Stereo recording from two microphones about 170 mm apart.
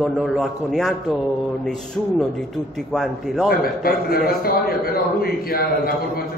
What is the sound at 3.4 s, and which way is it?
A man's voice, 60° left (ahead or behind).